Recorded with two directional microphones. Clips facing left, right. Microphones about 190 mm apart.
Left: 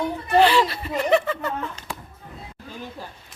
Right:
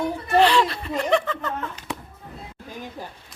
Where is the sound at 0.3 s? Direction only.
Centre (ahead or behind).